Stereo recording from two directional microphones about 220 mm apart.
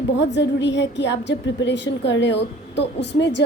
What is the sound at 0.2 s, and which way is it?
A woman's voice, 55° left (ahead or behind).